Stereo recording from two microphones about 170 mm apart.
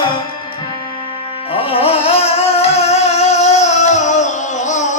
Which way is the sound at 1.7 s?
35° left (ahead or behind).